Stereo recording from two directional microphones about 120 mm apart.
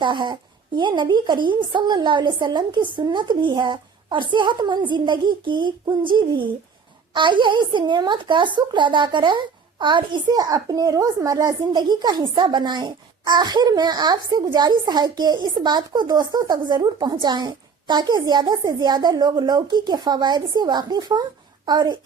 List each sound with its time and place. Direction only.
0.0 s a woman's voice: 40° right (ahead or behind)